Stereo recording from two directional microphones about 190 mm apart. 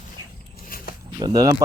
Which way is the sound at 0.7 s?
50° left (ahead or behind).